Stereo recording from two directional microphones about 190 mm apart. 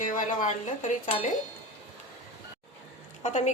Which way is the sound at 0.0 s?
45° left (ahead or behind).